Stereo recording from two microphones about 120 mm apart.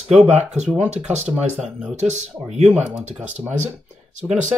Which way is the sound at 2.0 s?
70° right (ahead or behind).